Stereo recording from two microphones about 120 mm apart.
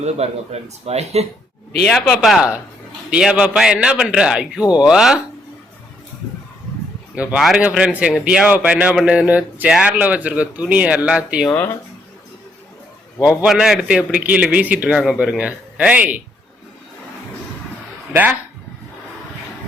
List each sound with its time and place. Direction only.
0.2 s speech: 60° right (ahead or behind)
1.9 s a man's voice: centre (ahead or behind)
7.2 s a man's voice: 10° right (ahead or behind)
13.2 s a man's voice: 5° right (ahead or behind)